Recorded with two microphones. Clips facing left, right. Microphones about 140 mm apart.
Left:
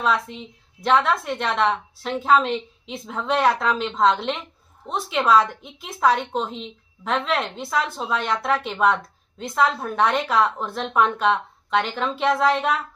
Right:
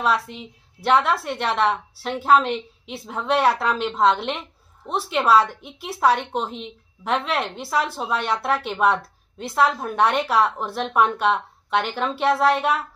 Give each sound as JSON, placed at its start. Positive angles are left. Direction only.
{"t": 0.0, "sound": "a woman's voice", "side_deg": -5}